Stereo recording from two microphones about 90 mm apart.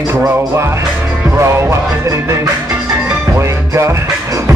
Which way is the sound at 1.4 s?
30° right (ahead or behind).